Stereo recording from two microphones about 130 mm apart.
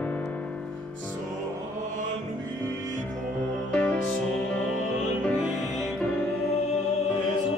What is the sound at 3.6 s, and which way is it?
Music, 5° left (ahead or behind).